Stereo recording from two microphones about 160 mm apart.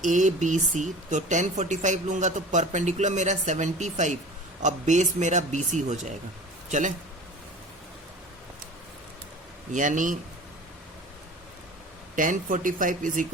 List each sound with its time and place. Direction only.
0.0 s speech: 50° right (ahead or behind)
9.7 s speech: 50° right (ahead or behind)
12.1 s speech: 55° right (ahead or behind)